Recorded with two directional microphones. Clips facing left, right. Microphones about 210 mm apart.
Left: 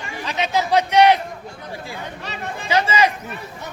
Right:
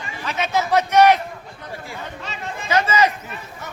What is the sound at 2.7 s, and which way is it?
Speech, 10° left (ahead or behind).